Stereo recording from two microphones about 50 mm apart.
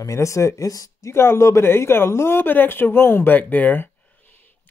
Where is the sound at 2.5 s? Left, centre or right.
Left.